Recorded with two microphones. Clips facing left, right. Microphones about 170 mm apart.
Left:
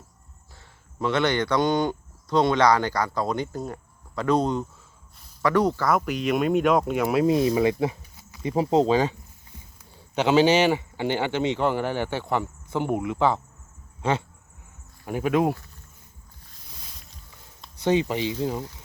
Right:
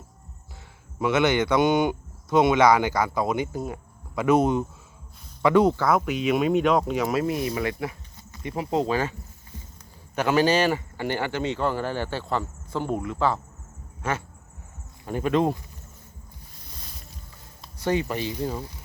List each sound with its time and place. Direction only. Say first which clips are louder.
0.9 s speech: right 2 dB; 10° right (ahead or behind)
5.4 s speech: right 3 dB; 20° right (ahead or behind)
5.7 s speech: right 1 dB; centre (ahead or behind)
7.3 s speech: left 6 dB; 25° left (ahead or behind)
10.2 s speech: left 2 dB; 20° left (ahead or behind)
17.8 s speech: left 3 dB; 20° left (ahead or behind)